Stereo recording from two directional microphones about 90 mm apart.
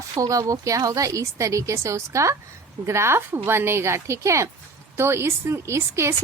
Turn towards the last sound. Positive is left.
turn(degrees=-30)  # may be behind; listen again after turning